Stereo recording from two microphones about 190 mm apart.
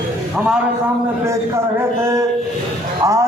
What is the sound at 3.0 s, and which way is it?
Music, 15° right (ahead or behind).